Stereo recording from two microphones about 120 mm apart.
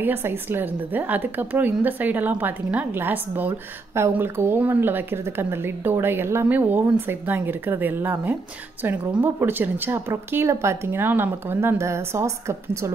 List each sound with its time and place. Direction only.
0.0 s a woman's voice: 20° right (ahead or behind)